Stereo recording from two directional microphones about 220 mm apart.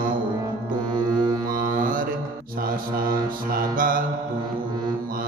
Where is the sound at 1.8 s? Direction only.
40° right (ahead or behind).